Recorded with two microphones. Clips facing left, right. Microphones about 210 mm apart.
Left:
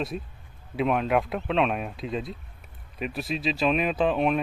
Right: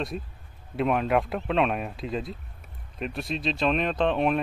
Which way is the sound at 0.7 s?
Centre (ahead or behind).